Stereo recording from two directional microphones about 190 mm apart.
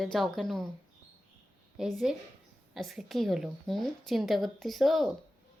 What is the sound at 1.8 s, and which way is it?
Speech, 5° right (ahead or behind).